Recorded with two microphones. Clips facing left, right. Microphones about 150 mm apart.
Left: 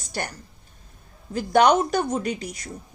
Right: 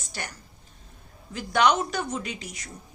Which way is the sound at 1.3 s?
50° left (ahead or behind).